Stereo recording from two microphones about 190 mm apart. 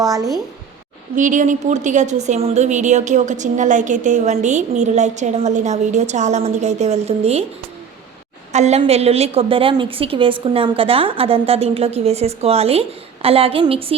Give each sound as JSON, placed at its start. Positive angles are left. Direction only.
{"t": 0.0, "sound": "speech", "side_deg": -20}
{"t": 1.1, "sound": "a woman's voice", "side_deg": -40}
{"t": 8.5, "sound": "a woman's voice", "side_deg": -35}